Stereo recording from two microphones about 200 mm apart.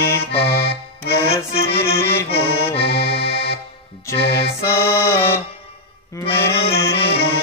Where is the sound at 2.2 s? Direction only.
30° left (ahead or behind).